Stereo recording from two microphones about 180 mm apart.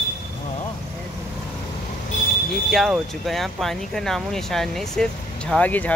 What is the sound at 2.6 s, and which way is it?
Speech, centre (ahead or behind).